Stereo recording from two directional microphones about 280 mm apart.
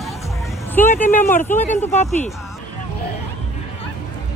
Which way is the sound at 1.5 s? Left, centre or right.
Left.